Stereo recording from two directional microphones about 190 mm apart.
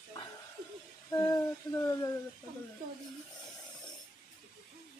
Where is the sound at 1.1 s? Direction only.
15° left (ahead or behind).